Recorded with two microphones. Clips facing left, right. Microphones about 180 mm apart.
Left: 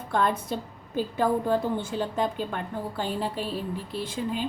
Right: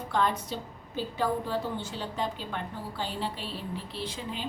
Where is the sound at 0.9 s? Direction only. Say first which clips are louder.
Left 5 dB; 50° left (ahead or behind).